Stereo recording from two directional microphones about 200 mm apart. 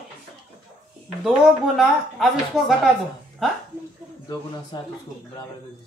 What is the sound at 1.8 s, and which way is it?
Speech, centre (ahead or behind).